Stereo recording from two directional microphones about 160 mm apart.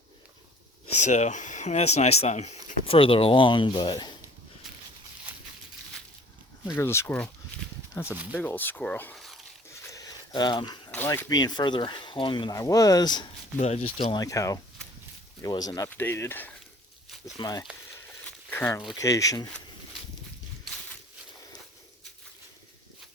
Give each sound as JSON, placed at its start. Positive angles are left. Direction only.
{"t": 0.9, "sound": "speech", "side_deg": 45}
{"t": 6.7, "sound": "speech", "side_deg": 15}
{"t": 8.3, "sound": "speech", "side_deg": 10}
{"t": 9.1, "sound": "a sound", "side_deg": 0}
{"t": 9.9, "sound": "a sound", "side_deg": 25}
{"t": 10.9, "sound": "speech", "side_deg": 15}
{"t": 13.6, "sound": "speech", "side_deg": 40}
{"t": 15.9, "sound": "speech", "side_deg": 15}
{"t": 17.3, "sound": "speech", "side_deg": 25}
{"t": 18.3, "sound": "a sound", "side_deg": 15}
{"t": 18.9, "sound": "speech", "side_deg": 20}